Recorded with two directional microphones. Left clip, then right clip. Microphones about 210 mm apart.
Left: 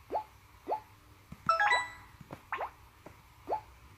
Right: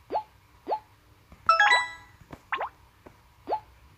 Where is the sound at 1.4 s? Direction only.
15° right (ahead or behind).